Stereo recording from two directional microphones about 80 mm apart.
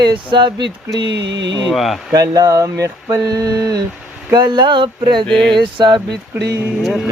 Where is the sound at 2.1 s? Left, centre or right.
Right.